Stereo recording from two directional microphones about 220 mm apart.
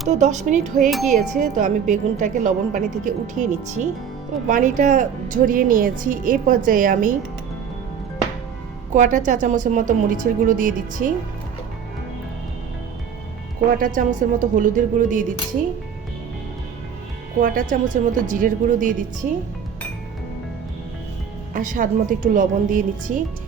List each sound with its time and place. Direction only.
0.1 s a woman's voice: 30° right (ahead or behind)
8.9 s a woman's voice: 35° right (ahead or behind)
13.7 s a woman's voice: 35° right (ahead or behind)
17.4 s a woman's voice: 40° right (ahead or behind)
21.5 s a woman's voice: 40° right (ahead or behind)